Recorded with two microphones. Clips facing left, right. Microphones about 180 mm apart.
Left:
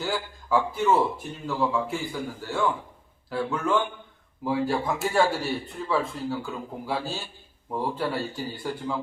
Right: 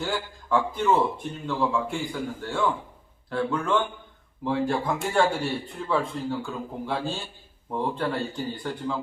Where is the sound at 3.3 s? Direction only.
5° left (ahead or behind).